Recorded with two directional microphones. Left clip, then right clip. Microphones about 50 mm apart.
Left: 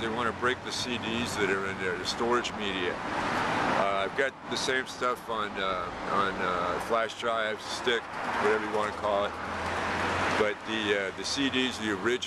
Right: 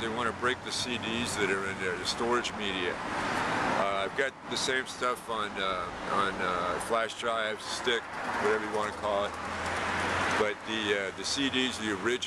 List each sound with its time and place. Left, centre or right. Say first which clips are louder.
0.0 s speech: left 1 dB; centre
3.4 s vehicle: left 2 dB; left
3.8 s speech: left 2 dB; centre
10.4 s speech: left 2 dB; centre